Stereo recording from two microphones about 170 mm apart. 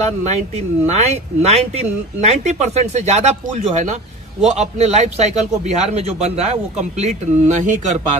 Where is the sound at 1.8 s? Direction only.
40° right (ahead or behind).